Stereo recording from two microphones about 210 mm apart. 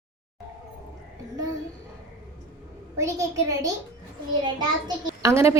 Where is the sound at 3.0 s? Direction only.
15° right (ahead or behind).